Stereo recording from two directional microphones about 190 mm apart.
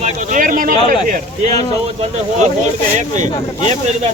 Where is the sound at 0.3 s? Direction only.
45° right (ahead or behind).